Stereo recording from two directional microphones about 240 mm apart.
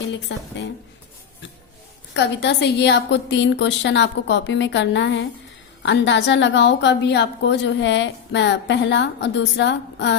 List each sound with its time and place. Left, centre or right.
0.3 s a woman's voice: left
2.1 s a woman's voice: left